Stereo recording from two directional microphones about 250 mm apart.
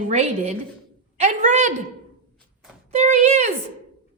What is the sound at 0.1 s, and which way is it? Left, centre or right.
A woman's voice, right.